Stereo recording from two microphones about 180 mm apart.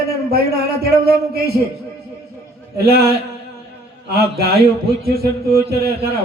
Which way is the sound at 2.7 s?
60° right (ahead or behind).